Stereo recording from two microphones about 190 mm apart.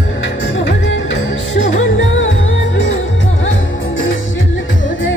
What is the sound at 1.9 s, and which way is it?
Music, 80° left.